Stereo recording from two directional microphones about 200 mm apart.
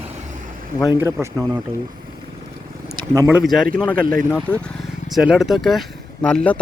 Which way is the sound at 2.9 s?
15° right (ahead or behind).